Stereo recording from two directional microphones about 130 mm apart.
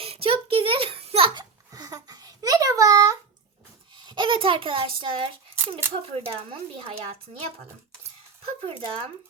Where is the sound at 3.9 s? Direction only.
35° right (ahead or behind).